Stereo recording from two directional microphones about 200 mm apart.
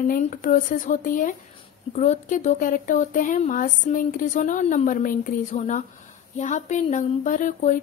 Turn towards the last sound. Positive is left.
turn(degrees=40)  # may be behind; listen again after turning